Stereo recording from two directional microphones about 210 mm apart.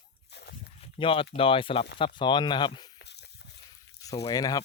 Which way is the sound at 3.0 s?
55° left (ahead or behind).